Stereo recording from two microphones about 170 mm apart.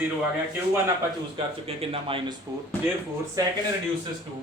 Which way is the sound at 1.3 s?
30° right (ahead or behind).